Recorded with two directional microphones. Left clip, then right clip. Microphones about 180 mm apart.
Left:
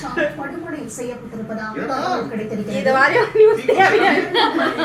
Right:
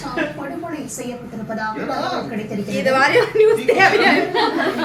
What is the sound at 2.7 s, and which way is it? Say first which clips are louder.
Speech: even; 20° right (ahead or behind).